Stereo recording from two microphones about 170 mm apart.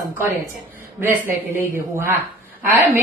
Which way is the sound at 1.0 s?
10° right (ahead or behind).